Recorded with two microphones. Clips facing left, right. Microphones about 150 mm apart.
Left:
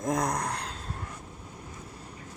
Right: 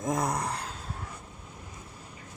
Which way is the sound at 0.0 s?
5° right (ahead or behind).